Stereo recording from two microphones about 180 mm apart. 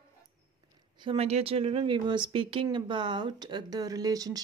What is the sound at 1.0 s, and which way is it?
Speech, 30° right (ahead or behind).